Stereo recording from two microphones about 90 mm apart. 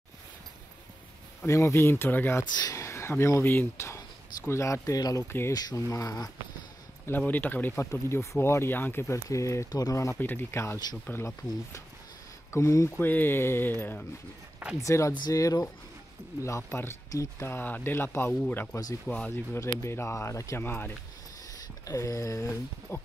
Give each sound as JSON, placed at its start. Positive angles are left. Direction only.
{"t": 1.4, "sound": "speech", "side_deg": 30}
{"t": 7.1, "sound": "speech", "side_deg": 20}
{"t": 9.7, "sound": "speech", "side_deg": 45}
{"t": 10.1, "sound": "speech", "side_deg": 20}
{"t": 12.4, "sound": "speech", "side_deg": 30}
{"t": 13.0, "sound": "speech", "side_deg": 20}
{"t": 14.8, "sound": "speech", "side_deg": 35}
{"t": 19.5, "sound": "speech", "side_deg": 30}
{"t": 21.8, "sound": "speech", "side_deg": 35}